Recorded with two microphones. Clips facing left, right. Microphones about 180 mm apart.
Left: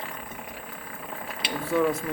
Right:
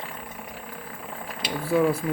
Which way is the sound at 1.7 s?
5° right (ahead or behind).